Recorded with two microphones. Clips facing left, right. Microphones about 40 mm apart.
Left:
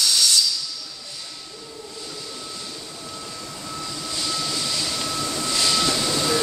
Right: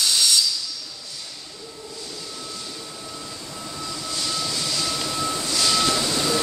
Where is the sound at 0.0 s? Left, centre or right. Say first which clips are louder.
Even; centre.